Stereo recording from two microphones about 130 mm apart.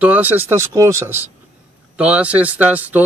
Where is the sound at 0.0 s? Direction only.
10° right (ahead or behind).